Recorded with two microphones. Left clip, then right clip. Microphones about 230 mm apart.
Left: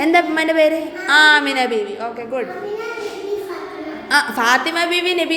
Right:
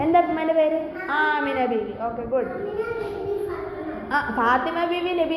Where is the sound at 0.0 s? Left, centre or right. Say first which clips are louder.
Left 4 dB; left.